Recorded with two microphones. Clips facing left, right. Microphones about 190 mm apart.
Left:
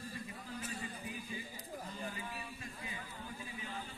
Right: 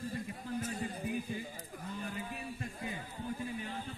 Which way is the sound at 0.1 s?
50° right (ahead or behind).